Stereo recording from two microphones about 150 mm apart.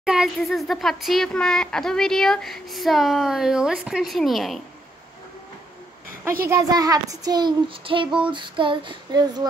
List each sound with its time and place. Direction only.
0.0 s speech: 5° right (ahead or behind)
6.5 s child singing: 25° right (ahead or behind)